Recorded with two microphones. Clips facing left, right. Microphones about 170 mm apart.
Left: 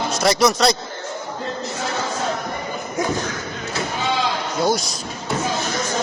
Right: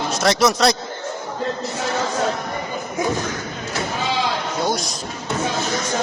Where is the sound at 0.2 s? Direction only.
Centre (ahead or behind).